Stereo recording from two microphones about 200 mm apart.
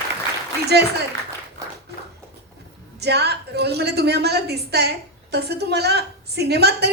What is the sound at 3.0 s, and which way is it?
A woman's voice, 55° right (ahead or behind).